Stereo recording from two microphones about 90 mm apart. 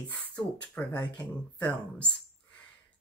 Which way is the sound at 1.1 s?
10° left (ahead or behind).